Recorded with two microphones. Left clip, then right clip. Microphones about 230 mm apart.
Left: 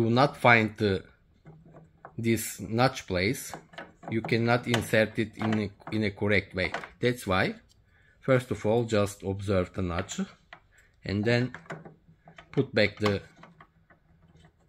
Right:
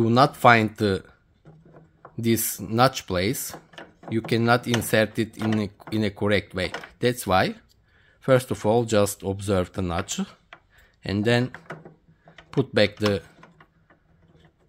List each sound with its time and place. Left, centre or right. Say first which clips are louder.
0.0 s speech: right 5 dB; right
1.7 s a sound: right 1 dB; centre
2.2 s speech: right 4 dB; right